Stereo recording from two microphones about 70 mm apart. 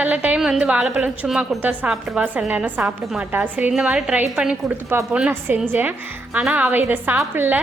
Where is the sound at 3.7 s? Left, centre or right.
Centre.